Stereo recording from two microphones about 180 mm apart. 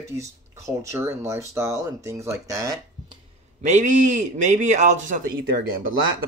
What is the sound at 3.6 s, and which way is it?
A man's voice, 40° right (ahead or behind).